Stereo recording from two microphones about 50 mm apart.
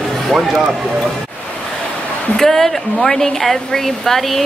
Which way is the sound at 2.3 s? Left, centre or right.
Centre.